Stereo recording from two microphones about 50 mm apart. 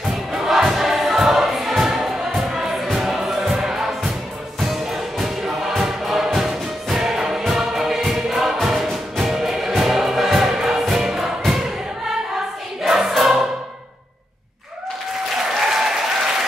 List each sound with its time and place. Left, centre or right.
0.3 s choir: centre
4.6 s music: centre
12.8 s choir: centre
15.6 s applause: centre